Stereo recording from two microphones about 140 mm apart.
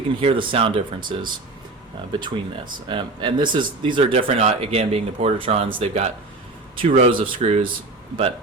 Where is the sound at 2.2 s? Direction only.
35° right (ahead or behind); by 6.1 s 50° right (ahead or behind).